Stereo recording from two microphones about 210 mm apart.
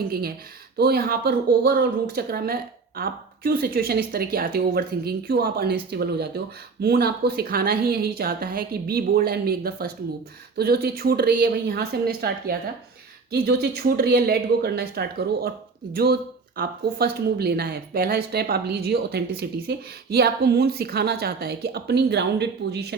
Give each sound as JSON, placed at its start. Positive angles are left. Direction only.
{"t": 0.1, "sound": "a woman's voice", "side_deg": -45}
{"t": 16.6, "sound": "a woman's voice", "side_deg": -50}